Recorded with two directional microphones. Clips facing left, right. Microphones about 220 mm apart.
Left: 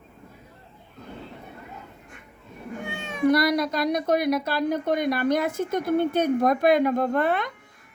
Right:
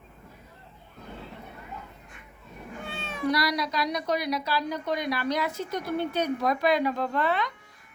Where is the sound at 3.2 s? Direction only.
50° left (ahead or behind).